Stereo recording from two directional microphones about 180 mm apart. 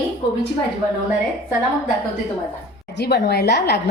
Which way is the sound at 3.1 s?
65° left (ahead or behind).